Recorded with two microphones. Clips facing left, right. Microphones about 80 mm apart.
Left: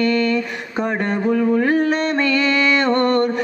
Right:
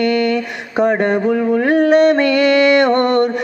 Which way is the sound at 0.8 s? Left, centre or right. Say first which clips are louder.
Right 7 dB; right.